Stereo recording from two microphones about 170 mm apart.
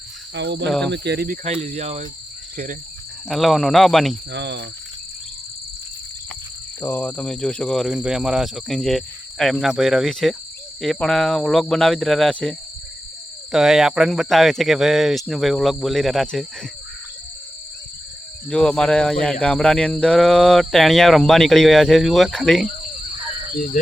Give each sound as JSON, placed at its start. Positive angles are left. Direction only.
{"t": 0.3, "sound": "cricket", "side_deg": -90}
{"t": 0.7, "sound": "speech", "side_deg": 5}
{"t": 0.9, "sound": "cricket", "side_deg": -75}
{"t": 1.6, "sound": "speech", "side_deg": -40}
{"t": 3.2, "sound": "speech", "side_deg": 0}
{"t": 4.3, "sound": "cricket", "side_deg": -90}
{"t": 6.8, "sound": "speech", "side_deg": 10}
{"t": 18.4, "sound": "speech", "side_deg": 5}
{"t": 23.7, "sound": "speech", "side_deg": 55}